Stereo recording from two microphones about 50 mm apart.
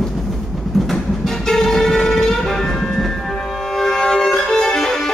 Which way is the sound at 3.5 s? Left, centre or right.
Centre.